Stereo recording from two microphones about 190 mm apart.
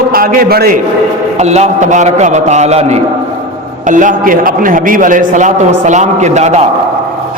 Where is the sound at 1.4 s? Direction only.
35° right (ahead or behind).